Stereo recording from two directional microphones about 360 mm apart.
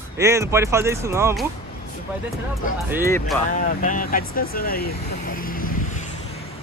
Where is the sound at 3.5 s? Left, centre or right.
Left.